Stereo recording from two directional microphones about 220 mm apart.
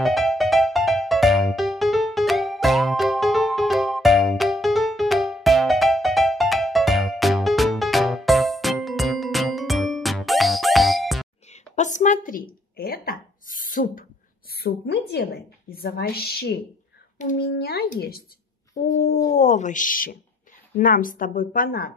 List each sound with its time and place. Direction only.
0.0 s music: centre (ahead or behind)
11.5 s a sound: 35° left (ahead or behind)
17.5 s a child's voice: 45° left (ahead or behind)
18.8 s a woman's voice: 35° left (ahead or behind)